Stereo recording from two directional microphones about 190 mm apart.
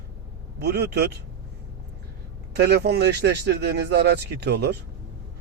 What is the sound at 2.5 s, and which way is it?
Speech, 55° right (ahead or behind).